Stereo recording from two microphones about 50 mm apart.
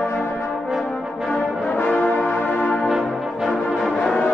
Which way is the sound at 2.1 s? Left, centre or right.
Left.